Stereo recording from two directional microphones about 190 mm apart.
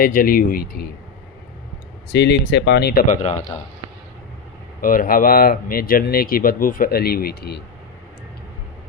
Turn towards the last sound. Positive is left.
turn(degrees=55)  # may be behind; listen again after turning